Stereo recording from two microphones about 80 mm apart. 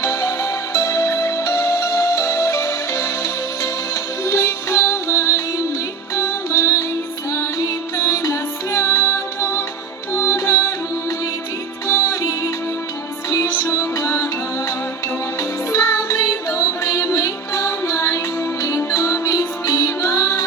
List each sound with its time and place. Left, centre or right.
0.0 s music: left
11.9 s music: left
13.7 s music: left
15.4 s music: left